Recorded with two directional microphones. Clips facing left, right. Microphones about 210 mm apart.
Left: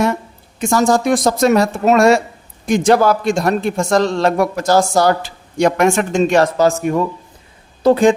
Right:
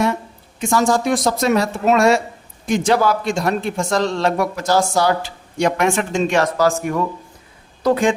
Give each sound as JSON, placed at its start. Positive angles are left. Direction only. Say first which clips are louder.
{"t": 0.6, "sound": "a man's voice", "louder": "left 3 dB", "side_deg": 45}
{"t": 6.6, "sound": "a woman's voice", "louder": "left 3 dB", "side_deg": 20}